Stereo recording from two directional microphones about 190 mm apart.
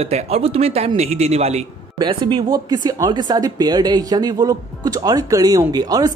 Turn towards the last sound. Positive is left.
turn(degrees=-20)  # may be behind; listen again after turning